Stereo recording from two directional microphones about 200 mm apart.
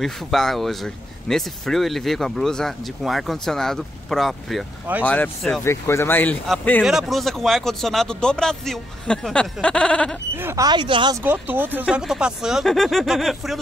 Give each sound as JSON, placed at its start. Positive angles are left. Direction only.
{"t": 0.0, "sound": "speech", "side_deg": 0}
{"t": 5.0, "sound": "speech", "side_deg": 5}
{"t": 10.3, "sound": "speech", "side_deg": -15}
{"t": 11.2, "sound": "speech", "side_deg": -10}